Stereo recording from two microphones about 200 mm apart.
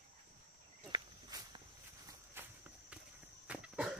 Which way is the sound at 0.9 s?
20° right (ahead or behind).